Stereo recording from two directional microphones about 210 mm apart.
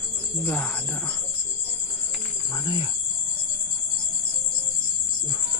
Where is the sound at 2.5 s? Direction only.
20° left (ahead or behind).